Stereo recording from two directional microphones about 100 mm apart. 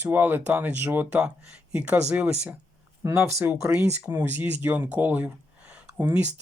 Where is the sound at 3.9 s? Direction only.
20° right (ahead or behind).